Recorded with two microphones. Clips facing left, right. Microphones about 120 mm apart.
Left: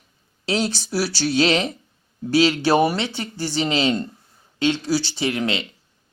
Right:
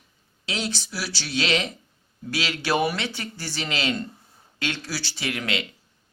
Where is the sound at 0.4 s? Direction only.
35° left (ahead or behind).